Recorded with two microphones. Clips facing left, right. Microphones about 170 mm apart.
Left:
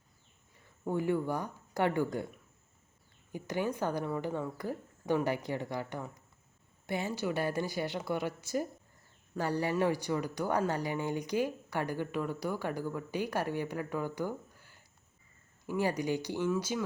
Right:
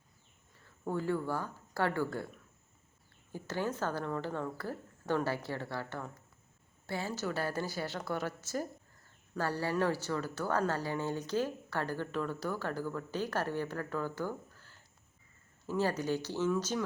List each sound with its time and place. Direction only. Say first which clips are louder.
0.6 s speech: left 3 dB; 15° left (ahead or behind)
3.3 s speech: left 2 dB; 15° left (ahead or behind)